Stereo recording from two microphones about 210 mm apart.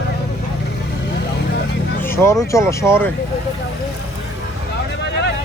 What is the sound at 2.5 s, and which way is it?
Speech, 15° left (ahead or behind).